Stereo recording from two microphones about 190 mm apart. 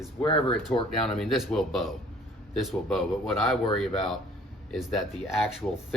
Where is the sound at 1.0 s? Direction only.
Centre (ahead or behind).